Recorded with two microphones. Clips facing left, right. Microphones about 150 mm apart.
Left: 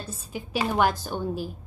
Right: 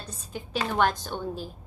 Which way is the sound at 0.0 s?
10° left (ahead or behind).